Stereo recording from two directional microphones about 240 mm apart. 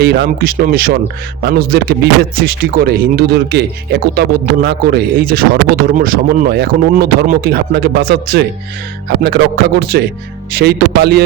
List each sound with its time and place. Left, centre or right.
0.0 s speech: right